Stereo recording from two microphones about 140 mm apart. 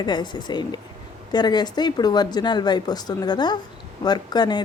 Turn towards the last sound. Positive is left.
turn(degrees=30)  # may be behind; listen again after turning